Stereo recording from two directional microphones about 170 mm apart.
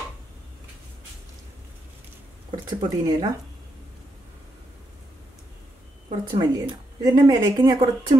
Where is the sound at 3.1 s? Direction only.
25° right (ahead or behind).